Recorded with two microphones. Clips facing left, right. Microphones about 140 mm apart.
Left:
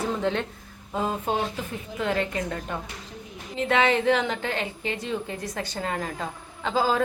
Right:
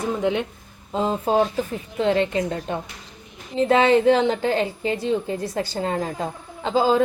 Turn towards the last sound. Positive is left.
turn(degrees=-30)  # may be behind; listen again after turning